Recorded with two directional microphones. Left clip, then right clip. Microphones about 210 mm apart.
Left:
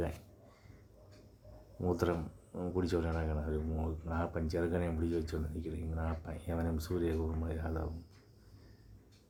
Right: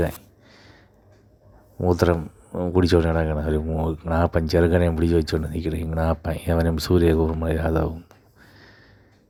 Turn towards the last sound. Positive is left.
turn(degrees=-40)  # may be behind; listen again after turning